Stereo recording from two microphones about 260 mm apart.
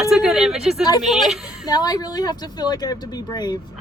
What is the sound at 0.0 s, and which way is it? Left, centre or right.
Speech, centre.